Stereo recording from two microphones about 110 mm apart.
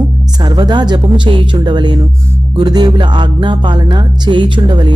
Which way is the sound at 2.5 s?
40° right (ahead or behind).